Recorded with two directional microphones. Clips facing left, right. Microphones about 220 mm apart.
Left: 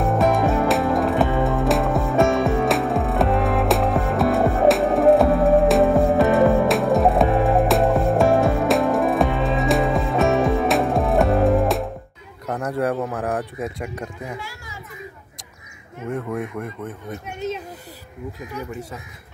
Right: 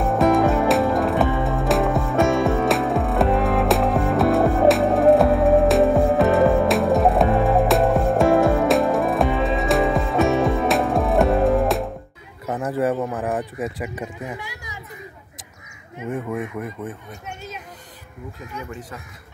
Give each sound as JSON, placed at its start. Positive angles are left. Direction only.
{"t": 0.0, "sound": "music", "side_deg": 0}
{"t": 12.4, "sound": "a sound", "side_deg": -5}
{"t": 13.7, "sound": "speech", "side_deg": -5}
{"t": 14.3, "sound": "speech", "side_deg": -15}
{"t": 16.1, "sound": "speech", "side_deg": -5}
{"t": 17.4, "sound": "speech", "side_deg": 20}